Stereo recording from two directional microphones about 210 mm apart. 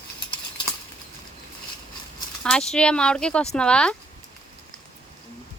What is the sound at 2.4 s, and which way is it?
Speech, 5° left (ahead or behind).